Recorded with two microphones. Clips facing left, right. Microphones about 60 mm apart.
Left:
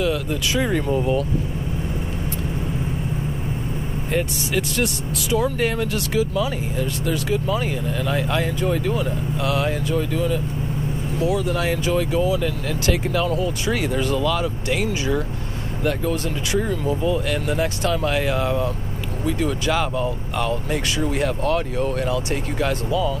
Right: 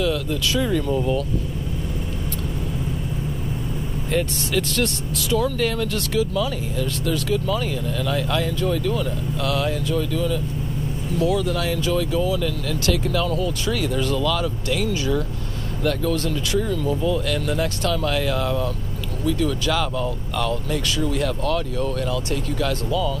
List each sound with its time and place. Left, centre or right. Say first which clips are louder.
0.0 s speech: even; centre
0.6 s speech: left 1 dB; left
4.1 s speech: even; centre
5.4 s speech: left 2 dB; left